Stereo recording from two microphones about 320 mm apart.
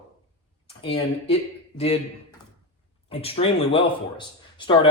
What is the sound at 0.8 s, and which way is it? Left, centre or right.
Speech, centre.